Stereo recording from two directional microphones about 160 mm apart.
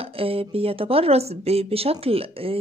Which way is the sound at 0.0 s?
35° right (ahead or behind).